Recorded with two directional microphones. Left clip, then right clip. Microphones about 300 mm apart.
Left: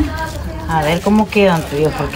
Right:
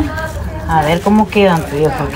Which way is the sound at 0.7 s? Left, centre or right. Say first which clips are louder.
Right 3 dB; centre.